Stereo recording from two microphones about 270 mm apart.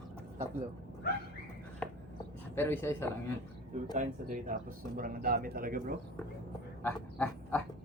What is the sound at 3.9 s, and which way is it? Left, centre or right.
Speech, right.